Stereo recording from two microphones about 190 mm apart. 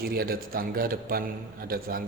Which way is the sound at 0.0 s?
50° right (ahead or behind).